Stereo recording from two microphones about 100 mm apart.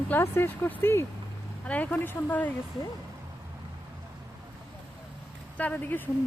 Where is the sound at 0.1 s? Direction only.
25° left (ahead or behind).